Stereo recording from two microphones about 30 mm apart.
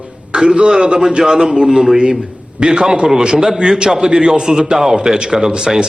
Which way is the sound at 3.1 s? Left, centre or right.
Centre.